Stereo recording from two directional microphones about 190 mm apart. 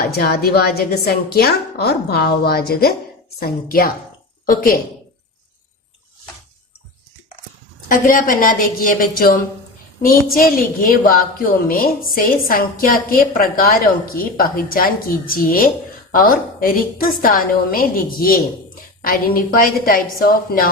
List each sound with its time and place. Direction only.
0.1 s a woman's voice: 55° left (ahead or behind)
7.9 s a woman's voice: 45° left (ahead or behind)